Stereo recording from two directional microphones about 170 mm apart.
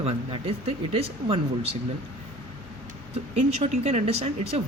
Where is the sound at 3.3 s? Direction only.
40° right (ahead or behind).